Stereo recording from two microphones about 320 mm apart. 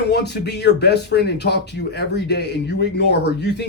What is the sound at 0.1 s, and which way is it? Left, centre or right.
Speech, left.